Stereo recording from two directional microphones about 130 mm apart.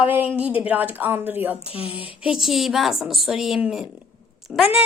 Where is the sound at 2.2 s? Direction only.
5° right (ahead or behind).